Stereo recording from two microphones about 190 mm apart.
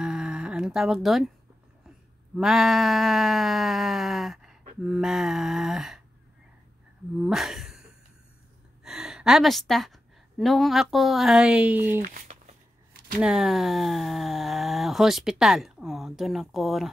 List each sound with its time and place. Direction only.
0.0 s humming: 5° right (ahead or behind)
2.3 s speech: centre (ahead or behind)
7.2 s a sound: centre (ahead or behind)
8.8 s a woman's voice: centre (ahead or behind)
12.0 s a sound: 40° right (ahead or behind)
13.2 s speech: centre (ahead or behind)